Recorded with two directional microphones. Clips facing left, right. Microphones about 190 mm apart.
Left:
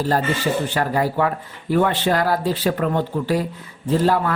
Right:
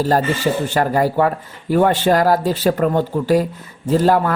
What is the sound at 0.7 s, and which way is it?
Speech, 45° right (ahead or behind).